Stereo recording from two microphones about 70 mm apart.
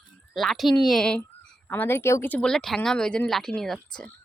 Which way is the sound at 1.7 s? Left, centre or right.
Left.